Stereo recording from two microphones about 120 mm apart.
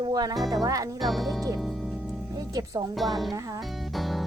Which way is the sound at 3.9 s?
Centre (ahead or behind).